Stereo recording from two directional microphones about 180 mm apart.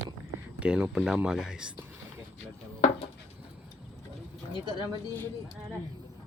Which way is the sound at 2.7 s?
40° left (ahead or behind).